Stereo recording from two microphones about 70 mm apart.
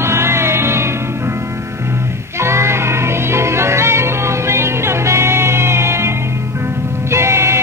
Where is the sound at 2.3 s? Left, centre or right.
Right.